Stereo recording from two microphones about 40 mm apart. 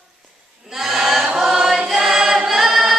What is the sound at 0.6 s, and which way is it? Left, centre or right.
Choir, centre.